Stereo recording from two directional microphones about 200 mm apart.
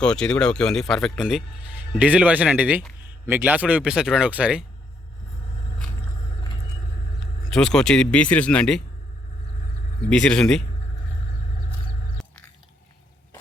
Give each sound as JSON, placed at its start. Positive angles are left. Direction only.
{"t": 0.0, "sound": "speech", "side_deg": 5}
{"t": 7.5, "sound": "speech", "side_deg": 5}
{"t": 10.1, "sound": "speech", "side_deg": 5}
{"t": 12.2, "sound": "chewing", "side_deg": 0}